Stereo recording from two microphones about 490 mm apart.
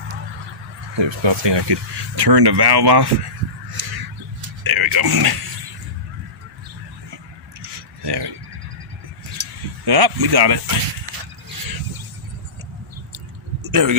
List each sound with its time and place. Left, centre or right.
0.9 s speech: right
3.8 s crow: right
4.6 s speech: right
8.0 s speech: right
9.4 s a sound: right
13.1 s drip: right